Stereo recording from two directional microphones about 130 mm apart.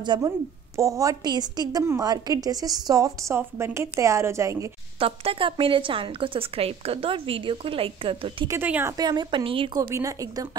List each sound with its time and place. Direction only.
0.0 s a woman's voice: 35° right (ahead or behind)
0.7 s a woman's voice: 25° right (ahead or behind)
4.9 s a woman's voice: 45° right (ahead or behind)
8.5 s speech: 15° right (ahead or behind)
8.9 s a woman's voice: 35° right (ahead or behind)
9.8 s a woman's voice: 25° right (ahead or behind)